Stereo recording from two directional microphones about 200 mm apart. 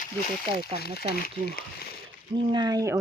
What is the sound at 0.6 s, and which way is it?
Speech, 50° left (ahead or behind).